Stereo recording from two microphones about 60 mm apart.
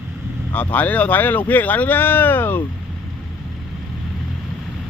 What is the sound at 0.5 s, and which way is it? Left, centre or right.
Speech, left.